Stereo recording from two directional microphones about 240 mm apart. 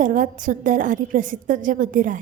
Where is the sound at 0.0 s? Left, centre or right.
Right.